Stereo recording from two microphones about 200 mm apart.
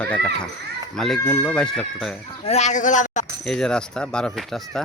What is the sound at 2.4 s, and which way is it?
Speech, 35° left (ahead or behind).